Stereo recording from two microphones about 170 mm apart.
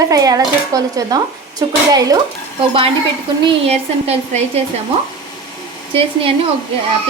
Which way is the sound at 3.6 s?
40° right (ahead or behind).